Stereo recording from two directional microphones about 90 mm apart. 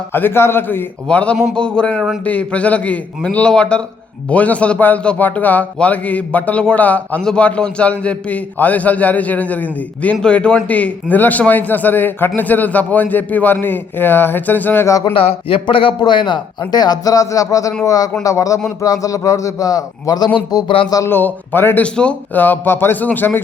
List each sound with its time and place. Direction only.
0.1 s a man's voice: 25° left (ahead or behind)
1.0 s a man's voice: 15° left (ahead or behind)
14.8 s speech: 35° left (ahead or behind)
15.1 s speech: 90° left
16.0 s a man's voice: 60° left (ahead or behind)
21.1 s a man's voice: 20° left (ahead or behind)